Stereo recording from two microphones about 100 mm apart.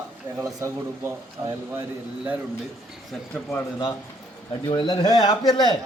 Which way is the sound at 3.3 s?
10° left (ahead or behind).